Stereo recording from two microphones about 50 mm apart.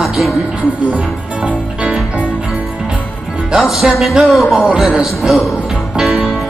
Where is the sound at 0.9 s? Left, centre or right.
Right.